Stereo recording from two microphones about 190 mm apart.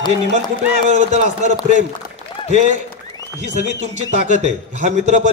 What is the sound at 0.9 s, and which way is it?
Speech, 35° right (ahead or behind).